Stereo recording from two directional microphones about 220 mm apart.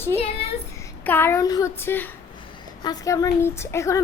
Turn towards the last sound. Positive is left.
turn(degrees=15)  # may be behind; listen again after turning